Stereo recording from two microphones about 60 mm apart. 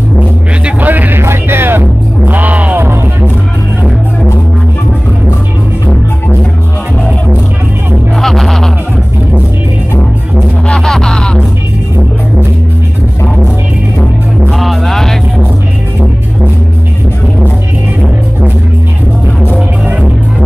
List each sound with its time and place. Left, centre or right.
0.7 s a sound: right
1.2 s music: right
2.8 s music: right
8.2 s music: centre
10.7 s a sound: centre
14.5 s music: centre